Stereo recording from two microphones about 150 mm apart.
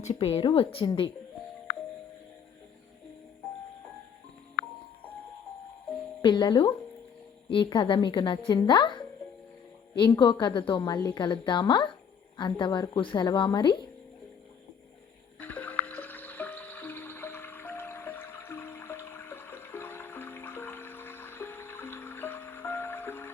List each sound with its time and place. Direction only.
0.0 s a woman's voice: 45° left (ahead or behind)
6.2 s a woman's voice: 30° left (ahead or behind)
15.4 s music: 10° left (ahead or behind)